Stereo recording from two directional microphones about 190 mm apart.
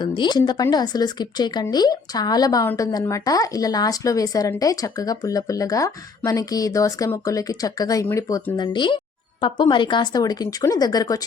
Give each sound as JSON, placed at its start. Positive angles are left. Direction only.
{"t": 0.0, "sound": "speech", "side_deg": 25}
{"t": 8.5, "sound": "speech", "side_deg": 25}